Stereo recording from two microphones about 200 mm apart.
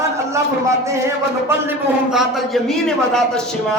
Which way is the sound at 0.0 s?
15° right (ahead or behind).